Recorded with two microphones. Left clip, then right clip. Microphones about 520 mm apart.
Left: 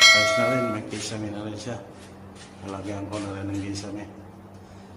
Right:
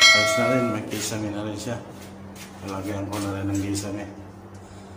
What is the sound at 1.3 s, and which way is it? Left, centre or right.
Speech, left.